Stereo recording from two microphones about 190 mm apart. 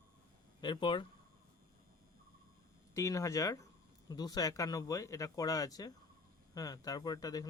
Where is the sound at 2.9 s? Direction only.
15° left (ahead or behind).